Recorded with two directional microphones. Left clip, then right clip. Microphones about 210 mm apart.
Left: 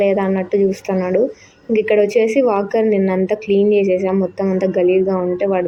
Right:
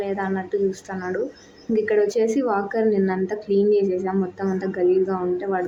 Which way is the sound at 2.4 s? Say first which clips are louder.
Left 6 dB; 10° left (ahead or behind).